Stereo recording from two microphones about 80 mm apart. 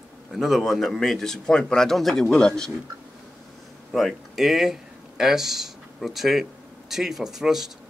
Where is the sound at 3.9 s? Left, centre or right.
Centre.